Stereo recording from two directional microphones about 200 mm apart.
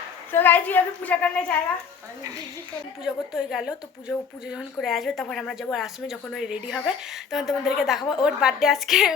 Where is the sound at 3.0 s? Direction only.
5° right (ahead or behind).